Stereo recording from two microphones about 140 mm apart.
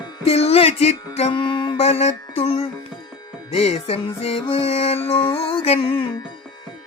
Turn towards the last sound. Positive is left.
turn(degrees=45)  # may be behind; listen again after turning